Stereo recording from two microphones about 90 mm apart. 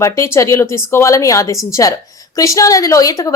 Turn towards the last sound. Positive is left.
turn(degrees=40)  # may be behind; listen again after turning